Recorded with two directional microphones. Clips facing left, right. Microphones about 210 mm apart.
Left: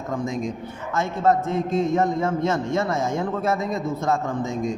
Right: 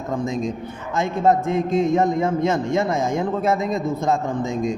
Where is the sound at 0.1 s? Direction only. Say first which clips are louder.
Right 3 dB; 25° right (ahead or behind).